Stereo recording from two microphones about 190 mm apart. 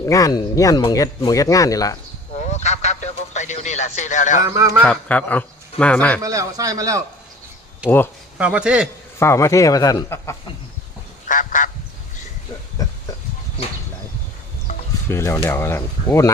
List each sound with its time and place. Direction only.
0.0 s speech: 20° left (ahead or behind)
2.3 s radio: 35° left (ahead or behind)
4.4 s speech: 15° right (ahead or behind)
4.8 s speech: 5° left (ahead or behind)
6.2 s speech: 20° right (ahead or behind)
7.9 s speech: 10° left (ahead or behind)
8.4 s a man's voice: 5° right (ahead or behind)
9.1 s speech: 15° left (ahead or behind)
11.3 s goose: 45° left (ahead or behind)
12.8 s a sound: 20° left (ahead or behind)
15.1 s speech: 15° left (ahead or behind)